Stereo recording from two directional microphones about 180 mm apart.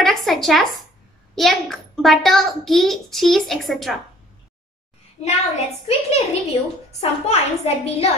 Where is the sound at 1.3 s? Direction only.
Centre (ahead or behind).